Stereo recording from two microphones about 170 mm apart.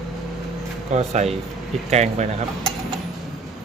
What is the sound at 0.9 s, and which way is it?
Speech, 40° right (ahead or behind).